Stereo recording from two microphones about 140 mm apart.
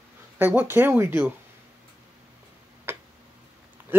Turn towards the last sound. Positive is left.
turn(degrees=-15)  # may be behind; listen again after turning